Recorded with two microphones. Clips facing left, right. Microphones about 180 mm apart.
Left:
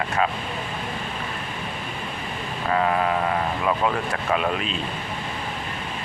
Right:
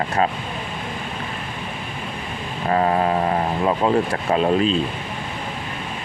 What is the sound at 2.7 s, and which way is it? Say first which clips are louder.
Speech: right 3 dB; 30° right (ahead or behind).